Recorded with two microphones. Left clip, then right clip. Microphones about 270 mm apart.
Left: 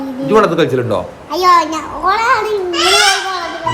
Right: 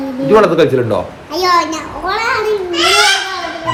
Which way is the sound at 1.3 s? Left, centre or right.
Centre.